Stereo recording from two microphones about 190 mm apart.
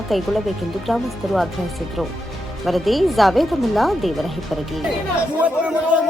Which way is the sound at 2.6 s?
Centre (ahead or behind).